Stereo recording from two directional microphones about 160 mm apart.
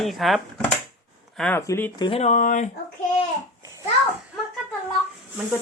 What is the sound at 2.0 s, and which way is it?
Speech, 40° left (ahead or behind).